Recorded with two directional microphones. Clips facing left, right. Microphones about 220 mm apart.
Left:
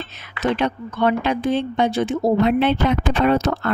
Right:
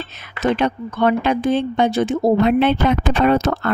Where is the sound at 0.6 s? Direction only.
45° right (ahead or behind).